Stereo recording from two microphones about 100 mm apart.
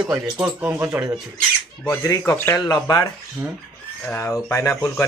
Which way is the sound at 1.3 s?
15° left (ahead or behind).